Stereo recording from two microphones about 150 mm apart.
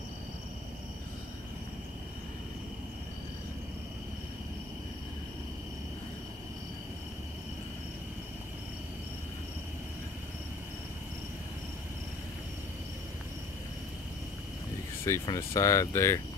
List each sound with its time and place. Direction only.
15.0 s speech: 20° left (ahead or behind)